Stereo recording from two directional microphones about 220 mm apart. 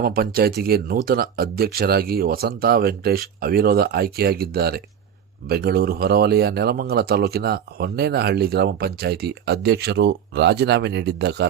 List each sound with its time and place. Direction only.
0.0 s speech: 40° right (ahead or behind)